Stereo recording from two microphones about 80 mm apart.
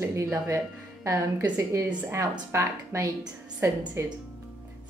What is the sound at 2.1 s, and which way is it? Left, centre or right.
Speech, right.